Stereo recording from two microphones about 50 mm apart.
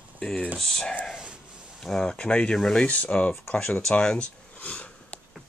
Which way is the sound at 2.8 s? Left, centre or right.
Left.